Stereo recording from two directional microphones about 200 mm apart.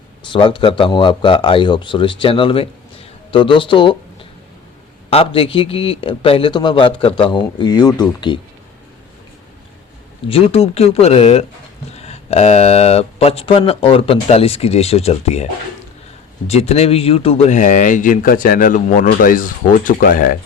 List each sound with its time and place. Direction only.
0.3 s a man's voice: 25° left (ahead or behind)
10.2 s speech: 25° left (ahead or behind)
16.5 s speech: 30° left (ahead or behind)